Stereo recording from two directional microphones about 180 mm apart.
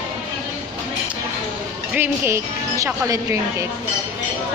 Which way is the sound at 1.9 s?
10° right (ahead or behind).